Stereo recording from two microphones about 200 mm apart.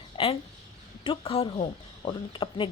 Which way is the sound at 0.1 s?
25° left (ahead or behind).